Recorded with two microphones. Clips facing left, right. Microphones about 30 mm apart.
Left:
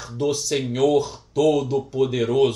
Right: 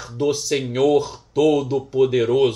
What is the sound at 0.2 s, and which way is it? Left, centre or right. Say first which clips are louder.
A man's voice: right 2 dB; centre.